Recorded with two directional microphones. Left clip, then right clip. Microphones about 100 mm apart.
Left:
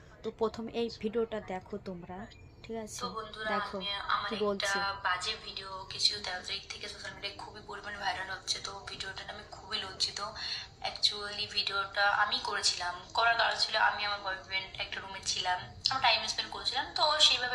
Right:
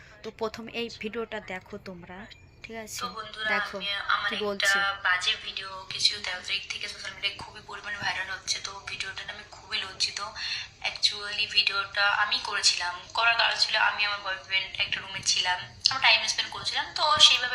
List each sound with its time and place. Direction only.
0.3 s speech: 10° left (ahead or behind)
3.0 s a woman's voice: 45° left (ahead or behind)